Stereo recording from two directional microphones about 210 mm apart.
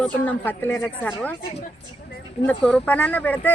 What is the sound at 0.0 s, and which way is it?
Speech, 10° left (ahead or behind).